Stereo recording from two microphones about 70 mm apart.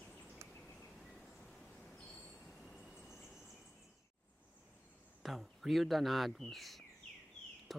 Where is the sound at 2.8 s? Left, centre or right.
Centre.